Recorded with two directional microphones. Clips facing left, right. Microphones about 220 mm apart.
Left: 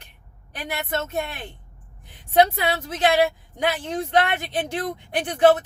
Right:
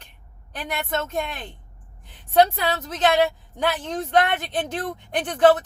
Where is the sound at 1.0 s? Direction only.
10° left (ahead or behind).